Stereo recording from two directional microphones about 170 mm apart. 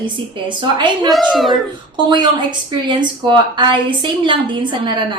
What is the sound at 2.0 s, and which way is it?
A woman's voice, 25° right (ahead or behind).